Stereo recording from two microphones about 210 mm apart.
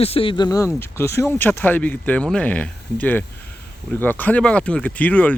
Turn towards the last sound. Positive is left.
turn(degrees=5)  # may be behind; listen again after turning